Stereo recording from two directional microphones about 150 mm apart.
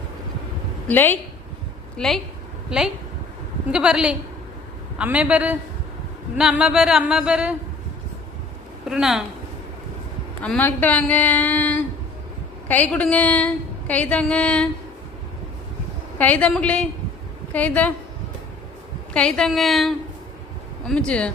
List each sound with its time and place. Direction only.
0.9 s a woman's voice: 15° left (ahead or behind)
2.0 s a woman's voice: centre (ahead or behind)
8.9 s speech: 5° right (ahead or behind)
10.4 s a woman's voice: 10° left (ahead or behind)
16.1 s a woman's voice: 10° left (ahead or behind)
19.1 s a woman's voice: 5° left (ahead or behind)